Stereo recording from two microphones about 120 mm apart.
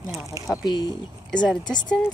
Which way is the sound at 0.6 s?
40° left (ahead or behind).